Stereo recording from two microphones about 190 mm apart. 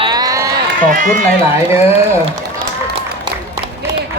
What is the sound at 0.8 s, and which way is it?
Speech, 45° right (ahead or behind).